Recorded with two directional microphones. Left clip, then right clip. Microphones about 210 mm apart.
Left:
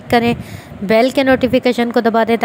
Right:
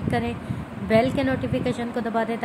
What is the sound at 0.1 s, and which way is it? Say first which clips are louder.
Speech: left 13 dB; 45° left (ahead or behind).